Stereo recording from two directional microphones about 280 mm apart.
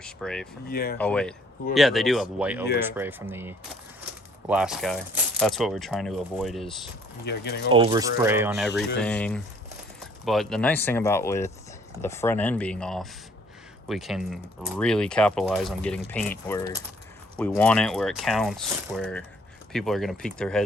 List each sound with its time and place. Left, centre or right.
0.0 s speech: centre
0.7 s speech: left
0.9 s speech: centre
7.3 s speech: left
7.7 s speech: centre